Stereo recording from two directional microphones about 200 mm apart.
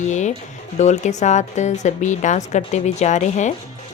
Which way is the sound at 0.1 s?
35° left (ahead or behind).